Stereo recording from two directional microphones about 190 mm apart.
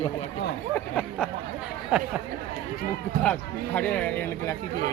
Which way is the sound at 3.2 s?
10° left (ahead or behind).